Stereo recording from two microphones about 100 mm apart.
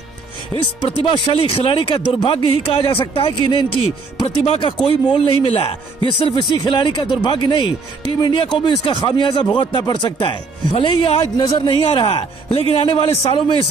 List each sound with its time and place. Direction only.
0.5 s speech: 25° left (ahead or behind)
1.1 s a man's voice: 60° left (ahead or behind)
6.2 s a man's voice: 50° left (ahead or behind)
11.3 s speech: 45° left (ahead or behind)
11.8 s a man's voice: 70° left (ahead or behind)